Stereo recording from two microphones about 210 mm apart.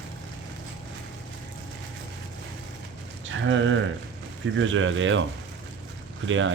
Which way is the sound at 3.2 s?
65° right (ahead or behind).